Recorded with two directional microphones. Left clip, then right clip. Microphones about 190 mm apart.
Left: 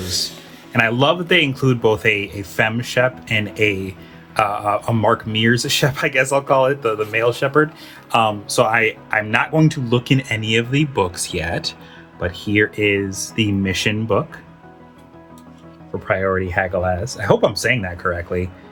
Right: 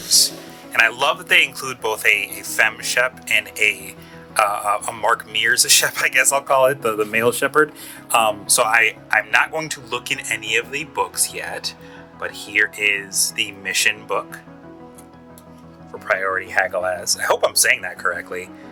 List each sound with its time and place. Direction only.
0.7 s speech: 35° right (ahead or behind)
12.2 s speech: 30° right (ahead or behind)
16.0 s speech: 35° right (ahead or behind)